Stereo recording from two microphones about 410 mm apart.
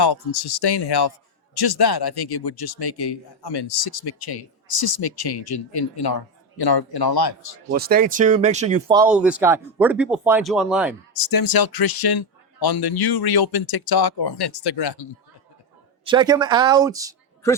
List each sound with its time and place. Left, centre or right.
0.0 s speech: left
7.7 s speech: right; by 10.9 s centre
11.1 s speech: left
16.0 s speech: centre